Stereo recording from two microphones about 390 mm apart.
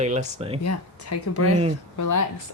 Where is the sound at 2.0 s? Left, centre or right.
Left.